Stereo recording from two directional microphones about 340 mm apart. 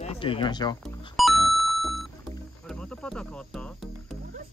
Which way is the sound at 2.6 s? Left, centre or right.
Centre.